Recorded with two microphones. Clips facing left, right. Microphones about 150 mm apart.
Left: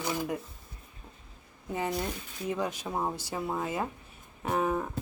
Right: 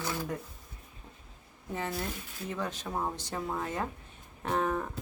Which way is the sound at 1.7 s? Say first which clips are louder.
Left 3 dB; 15° left (ahead or behind).